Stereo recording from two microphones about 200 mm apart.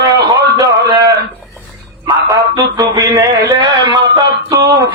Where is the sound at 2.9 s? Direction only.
20° right (ahead or behind).